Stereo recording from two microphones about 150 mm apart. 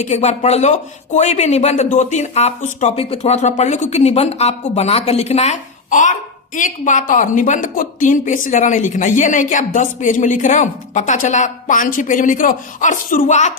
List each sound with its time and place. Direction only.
0.0 s speech: 45° left (ahead or behind)
2.9 s speech: 40° left (ahead or behind)